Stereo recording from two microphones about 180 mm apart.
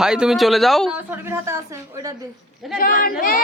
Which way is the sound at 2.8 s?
50° left (ahead or behind).